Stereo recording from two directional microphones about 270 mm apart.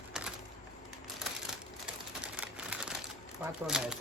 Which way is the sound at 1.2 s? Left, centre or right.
Centre.